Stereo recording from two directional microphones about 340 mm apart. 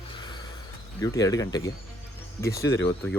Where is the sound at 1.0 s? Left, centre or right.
Centre.